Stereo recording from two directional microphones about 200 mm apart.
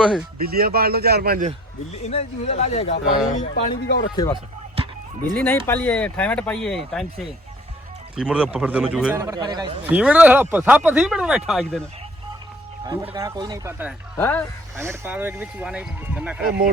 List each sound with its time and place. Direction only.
0.4 s speech: 50° right (ahead or behind)
2.0 s speech: 35° left (ahead or behind)
3.8 s speech: 60° left (ahead or behind)
4.1 s speech: 20° left (ahead or behind)
4.7 s a sound: 30° right (ahead or behind)
5.4 s speech: 10° left (ahead or behind)
9.1 s speech: 15° right (ahead or behind)
9.9 s speech: 5° right (ahead or behind)
12.8 s speech: 20° right (ahead or behind)
14.2 s speech: 10° left (ahead or behind)
14.8 s speech: 10° right (ahead or behind)